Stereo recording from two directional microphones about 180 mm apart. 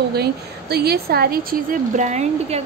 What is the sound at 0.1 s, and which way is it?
A woman's voice, 60° right (ahead or behind).